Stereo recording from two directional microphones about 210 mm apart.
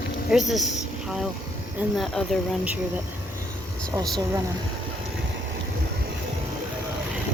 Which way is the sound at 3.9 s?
15° right (ahead or behind).